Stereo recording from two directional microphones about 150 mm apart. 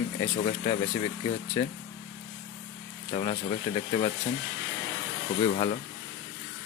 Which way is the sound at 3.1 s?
35° left (ahead or behind).